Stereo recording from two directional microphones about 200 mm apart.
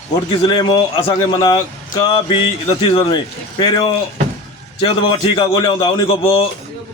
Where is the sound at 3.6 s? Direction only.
25° left (ahead or behind).